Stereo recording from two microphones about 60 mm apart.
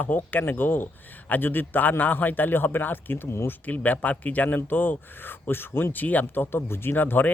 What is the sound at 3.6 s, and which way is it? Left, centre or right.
Speech, left.